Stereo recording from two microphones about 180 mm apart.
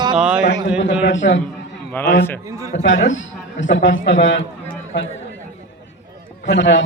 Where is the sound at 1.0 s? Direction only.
90° left.